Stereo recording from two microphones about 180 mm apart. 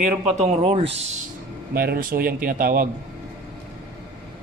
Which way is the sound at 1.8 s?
55° right (ahead or behind).